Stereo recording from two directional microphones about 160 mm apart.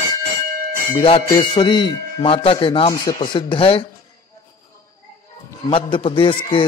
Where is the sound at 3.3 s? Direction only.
30° left (ahead or behind).